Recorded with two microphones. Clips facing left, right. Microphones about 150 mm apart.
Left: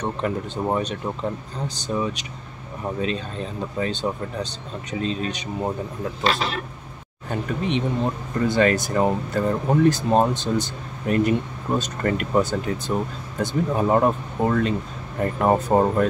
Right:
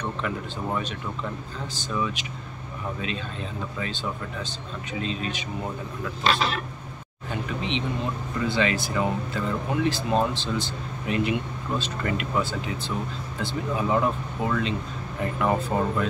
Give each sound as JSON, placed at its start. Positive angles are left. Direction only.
{"t": 0.0, "sound": "speech", "side_deg": 35}
{"t": 7.2, "sound": "speech", "side_deg": 45}